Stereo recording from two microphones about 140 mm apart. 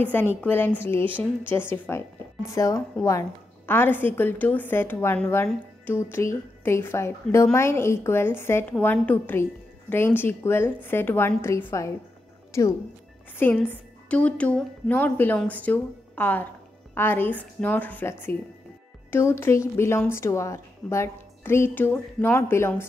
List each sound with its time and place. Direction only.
0.0 s a woman's voice: 15° left (ahead or behind)
13.4 s a woman's voice: 15° left (ahead or behind)